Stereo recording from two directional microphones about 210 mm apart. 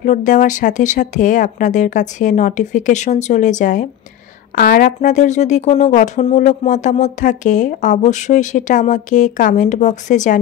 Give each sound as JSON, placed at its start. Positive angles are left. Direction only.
{"t": 0.0, "sound": "speech", "side_deg": 35}